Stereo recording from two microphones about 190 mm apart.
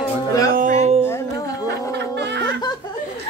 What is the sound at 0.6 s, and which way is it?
Speech, 40° right (ahead or behind).